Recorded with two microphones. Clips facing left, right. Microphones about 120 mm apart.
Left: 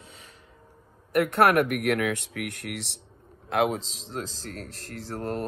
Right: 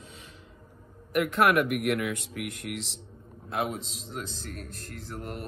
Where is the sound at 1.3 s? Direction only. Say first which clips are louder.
Left 2 dB; 60° left (ahead or behind).